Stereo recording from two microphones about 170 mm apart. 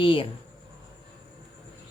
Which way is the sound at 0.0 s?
30° left (ahead or behind).